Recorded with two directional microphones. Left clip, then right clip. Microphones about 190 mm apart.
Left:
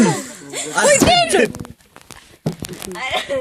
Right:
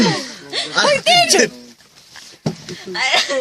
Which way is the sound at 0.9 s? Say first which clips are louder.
Left 1 dB; 45° left (ahead or behind).